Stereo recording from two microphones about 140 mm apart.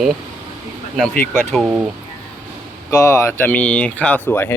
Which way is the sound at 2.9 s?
20° left (ahead or behind).